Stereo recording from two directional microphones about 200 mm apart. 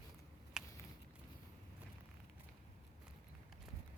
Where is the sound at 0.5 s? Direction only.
5° right (ahead or behind).